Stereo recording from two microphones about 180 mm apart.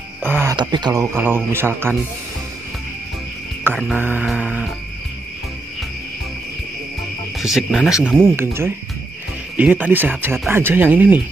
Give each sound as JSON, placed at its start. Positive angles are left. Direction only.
{"t": 0.2, "sound": "music", "side_deg": -10}
{"t": 0.6, "sound": "speech", "side_deg": -25}
{"t": 1.1, "sound": "music", "side_deg": -10}
{"t": 3.6, "sound": "music", "side_deg": -10}
{"t": 7.3, "sound": "cricket", "side_deg": 0}
{"t": 8.2, "sound": "music", "side_deg": -15}